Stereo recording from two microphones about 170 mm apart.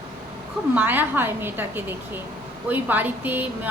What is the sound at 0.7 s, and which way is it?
A woman's voice, 10° right (ahead or behind).